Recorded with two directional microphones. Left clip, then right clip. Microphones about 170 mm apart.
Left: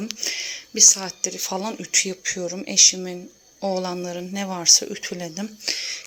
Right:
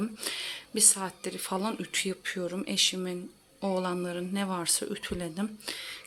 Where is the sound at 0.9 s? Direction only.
5° left (ahead or behind).